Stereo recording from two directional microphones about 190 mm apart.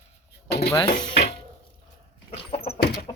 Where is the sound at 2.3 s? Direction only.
35° left (ahead or behind).